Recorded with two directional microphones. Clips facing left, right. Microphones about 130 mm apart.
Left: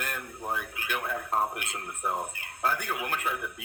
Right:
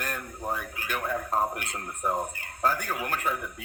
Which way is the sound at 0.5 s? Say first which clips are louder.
Left 1 dB; 40° right (ahead or behind).